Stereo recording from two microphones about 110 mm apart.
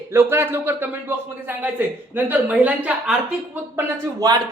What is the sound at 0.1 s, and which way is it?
A man's voice, 20° right (ahead or behind).